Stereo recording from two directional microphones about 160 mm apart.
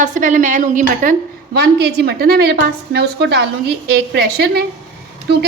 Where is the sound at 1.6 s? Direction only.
90° right.